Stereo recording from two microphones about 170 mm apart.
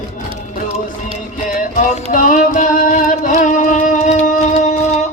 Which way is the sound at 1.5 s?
50° left (ahead or behind).